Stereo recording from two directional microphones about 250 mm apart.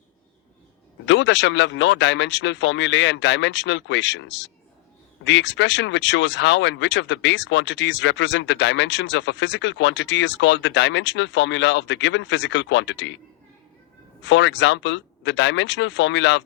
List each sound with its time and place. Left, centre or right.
1.0 s speech: left
14.2 s speech: left